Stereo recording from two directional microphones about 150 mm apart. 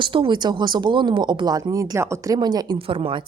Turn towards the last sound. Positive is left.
turn(degrees=-40)  # may be behind; listen again after turning